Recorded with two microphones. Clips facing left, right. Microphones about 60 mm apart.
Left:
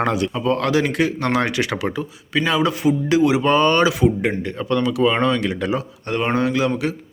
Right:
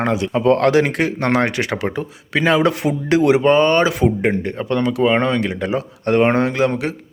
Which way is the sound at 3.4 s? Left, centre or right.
Right.